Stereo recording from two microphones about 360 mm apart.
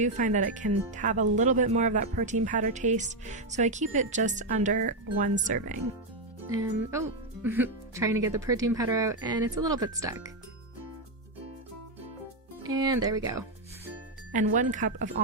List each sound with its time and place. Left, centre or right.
0.0 s speech: right
6.5 s speech: centre
12.7 s speech: centre
14.3 s speech: right